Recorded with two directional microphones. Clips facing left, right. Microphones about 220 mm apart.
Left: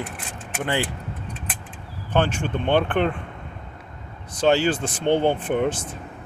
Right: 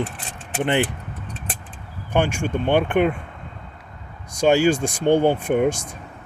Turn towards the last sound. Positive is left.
turn(degrees=-10)  # may be behind; listen again after turning